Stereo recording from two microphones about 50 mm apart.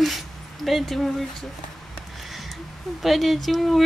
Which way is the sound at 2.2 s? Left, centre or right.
Centre.